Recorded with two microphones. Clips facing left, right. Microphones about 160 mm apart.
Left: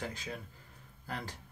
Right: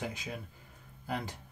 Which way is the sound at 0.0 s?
15° right (ahead or behind).